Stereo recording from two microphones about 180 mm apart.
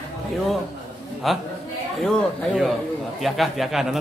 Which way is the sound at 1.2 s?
Centre (ahead or behind).